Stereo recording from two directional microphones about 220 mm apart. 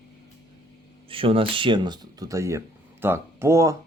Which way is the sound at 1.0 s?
25° right (ahead or behind).